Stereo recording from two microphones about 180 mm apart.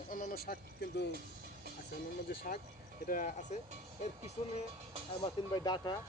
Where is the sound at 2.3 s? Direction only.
55° left (ahead or behind).